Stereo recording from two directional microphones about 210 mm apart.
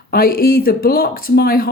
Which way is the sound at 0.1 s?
45° left (ahead or behind).